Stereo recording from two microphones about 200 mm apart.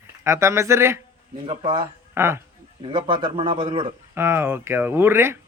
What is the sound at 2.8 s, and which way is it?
A man's voice, 25° right (ahead or behind).